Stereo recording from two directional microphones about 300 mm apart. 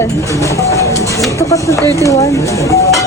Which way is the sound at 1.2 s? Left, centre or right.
Centre.